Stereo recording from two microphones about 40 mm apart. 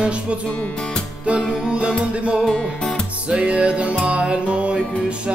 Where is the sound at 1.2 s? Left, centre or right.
Centre.